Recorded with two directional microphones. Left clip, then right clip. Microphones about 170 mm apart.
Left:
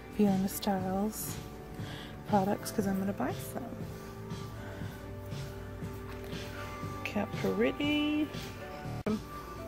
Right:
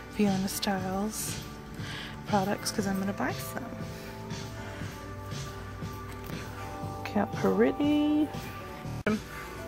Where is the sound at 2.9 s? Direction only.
5° left (ahead or behind).